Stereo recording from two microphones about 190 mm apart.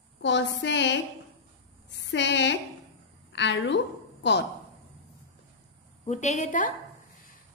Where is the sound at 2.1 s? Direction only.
65° left (ahead or behind).